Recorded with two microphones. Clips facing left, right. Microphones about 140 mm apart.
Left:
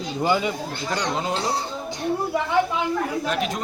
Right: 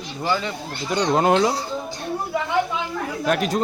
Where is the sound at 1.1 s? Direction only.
65° right (ahead or behind).